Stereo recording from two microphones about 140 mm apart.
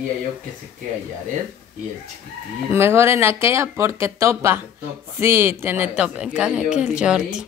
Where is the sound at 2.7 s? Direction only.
15° right (ahead or behind).